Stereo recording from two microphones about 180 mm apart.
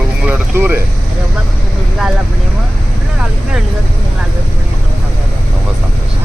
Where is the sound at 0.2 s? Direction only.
10° right (ahead or behind).